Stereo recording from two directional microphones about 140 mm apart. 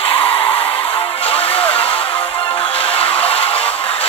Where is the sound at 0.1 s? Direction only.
40° left (ahead or behind).